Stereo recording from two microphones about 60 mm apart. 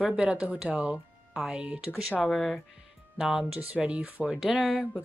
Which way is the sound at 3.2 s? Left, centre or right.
Centre.